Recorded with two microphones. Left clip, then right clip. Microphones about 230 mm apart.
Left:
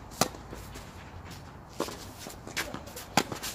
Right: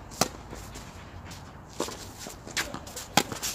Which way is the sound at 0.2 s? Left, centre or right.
Centre.